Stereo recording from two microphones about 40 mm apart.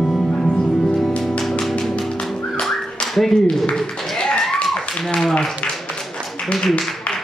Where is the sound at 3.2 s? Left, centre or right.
Centre.